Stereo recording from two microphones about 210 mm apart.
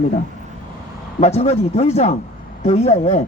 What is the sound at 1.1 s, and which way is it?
Speech, 30° left (ahead or behind).